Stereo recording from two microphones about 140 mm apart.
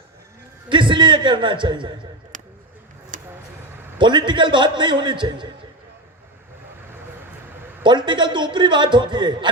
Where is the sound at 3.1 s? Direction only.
70° right (ahead or behind).